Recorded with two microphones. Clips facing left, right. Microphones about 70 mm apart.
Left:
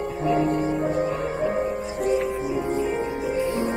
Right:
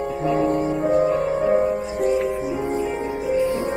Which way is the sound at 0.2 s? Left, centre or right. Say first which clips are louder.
Right 1 dB; right.